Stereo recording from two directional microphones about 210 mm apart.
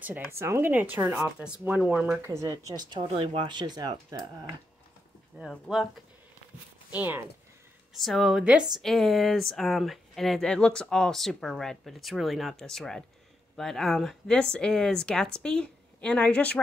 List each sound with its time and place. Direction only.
0.0 s speech: 10° right (ahead or behind)
2.7 s speech: 20° right (ahead or behind)
5.4 s speech: centre (ahead or behind)